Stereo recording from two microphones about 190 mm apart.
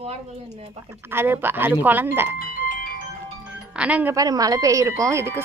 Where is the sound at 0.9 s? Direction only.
10° right (ahead or behind).